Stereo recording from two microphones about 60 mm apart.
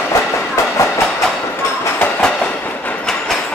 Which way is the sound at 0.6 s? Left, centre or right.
Left.